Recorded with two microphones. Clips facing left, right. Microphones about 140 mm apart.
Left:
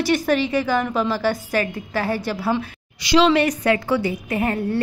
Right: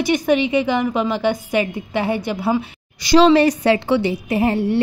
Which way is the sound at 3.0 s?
45° right (ahead or behind).